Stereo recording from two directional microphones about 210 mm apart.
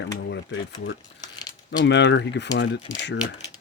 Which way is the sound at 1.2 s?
20° left (ahead or behind).